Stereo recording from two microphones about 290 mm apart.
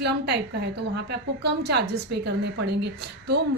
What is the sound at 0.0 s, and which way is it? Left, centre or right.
A woman's voice, right.